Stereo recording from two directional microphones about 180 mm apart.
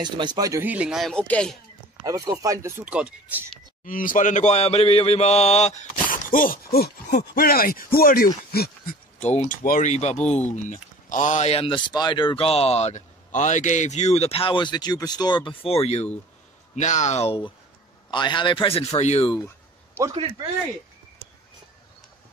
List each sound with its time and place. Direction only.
0.0 s speech: 25° right (ahead or behind); by 1.6 s 5° left (ahead or behind)
2.0 s speech: 20° right (ahead or behind)
2.8 s speech: 5° right (ahead or behind)
3.8 s mantra: 50° left (ahead or behind)
8.5 s a sound: 55° left (ahead or behind)
9.2 s a man's voice: 40° left (ahead or behind)